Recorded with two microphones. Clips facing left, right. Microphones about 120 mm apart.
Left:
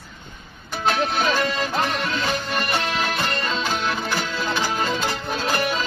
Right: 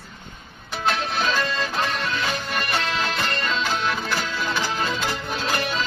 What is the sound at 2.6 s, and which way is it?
Music, 25° left (ahead or behind).